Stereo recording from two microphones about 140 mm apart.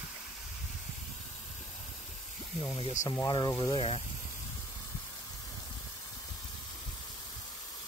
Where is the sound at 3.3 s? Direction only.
30° left (ahead or behind).